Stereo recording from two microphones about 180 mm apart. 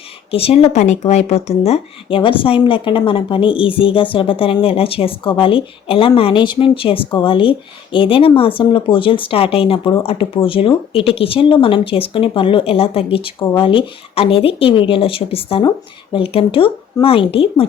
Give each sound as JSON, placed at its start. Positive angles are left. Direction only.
{"t": 0.3, "sound": "speech", "side_deg": 30}